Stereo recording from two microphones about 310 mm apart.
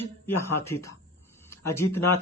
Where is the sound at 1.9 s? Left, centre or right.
Left.